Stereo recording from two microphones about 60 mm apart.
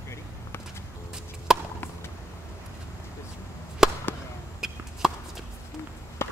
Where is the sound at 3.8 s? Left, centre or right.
Centre.